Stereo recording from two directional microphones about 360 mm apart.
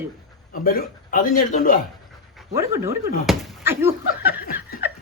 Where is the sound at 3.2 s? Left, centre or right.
Centre.